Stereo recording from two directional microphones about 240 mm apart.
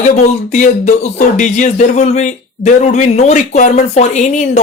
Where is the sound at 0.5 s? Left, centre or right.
Left.